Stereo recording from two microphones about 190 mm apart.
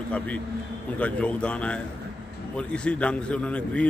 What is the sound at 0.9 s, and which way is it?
A man's voice, 5° left (ahead or behind).